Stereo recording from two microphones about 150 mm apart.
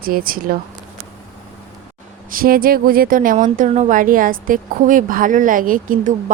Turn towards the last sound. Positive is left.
turn(degrees=-65)  # may be behind; listen again after turning